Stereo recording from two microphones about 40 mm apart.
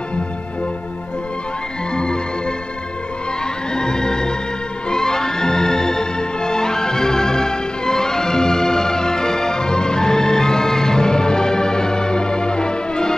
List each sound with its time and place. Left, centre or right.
2.0 s music: left
3.7 s music: centre